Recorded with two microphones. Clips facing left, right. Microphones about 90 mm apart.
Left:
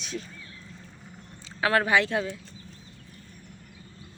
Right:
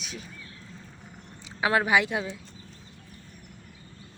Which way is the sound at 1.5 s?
15° right (ahead or behind).